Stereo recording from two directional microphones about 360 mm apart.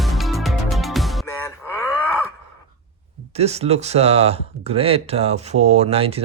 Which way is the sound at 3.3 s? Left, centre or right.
Centre.